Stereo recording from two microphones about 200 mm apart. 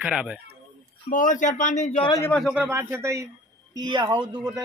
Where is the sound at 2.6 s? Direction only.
10° right (ahead or behind).